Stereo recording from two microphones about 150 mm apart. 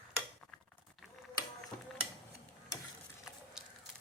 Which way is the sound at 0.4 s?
10° left (ahead or behind).